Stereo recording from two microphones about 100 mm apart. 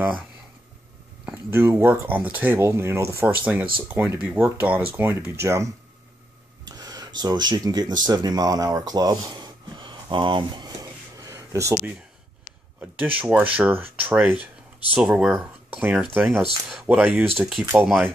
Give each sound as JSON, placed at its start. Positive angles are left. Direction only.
{"t": 1.3, "sound": "speech", "side_deg": -25}
{"t": 6.6, "sound": "speech", "side_deg": -40}
{"t": 10.8, "sound": "a sound", "side_deg": -35}
{"t": 12.9, "sound": "speech", "side_deg": -15}
{"t": 17.0, "sound": "speech", "side_deg": 0}